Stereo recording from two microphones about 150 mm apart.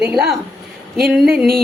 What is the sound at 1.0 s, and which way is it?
Speech, centre (ahead or behind).